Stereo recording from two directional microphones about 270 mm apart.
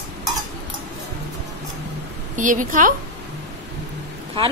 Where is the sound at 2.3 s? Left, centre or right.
Right.